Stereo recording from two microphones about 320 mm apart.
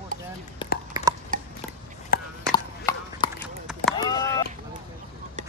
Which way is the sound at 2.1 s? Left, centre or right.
Left.